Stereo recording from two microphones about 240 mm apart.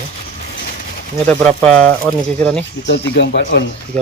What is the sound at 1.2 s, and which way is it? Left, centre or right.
Speech, centre.